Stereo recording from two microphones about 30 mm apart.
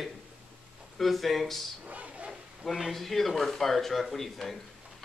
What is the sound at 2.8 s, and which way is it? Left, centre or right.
Speech, centre.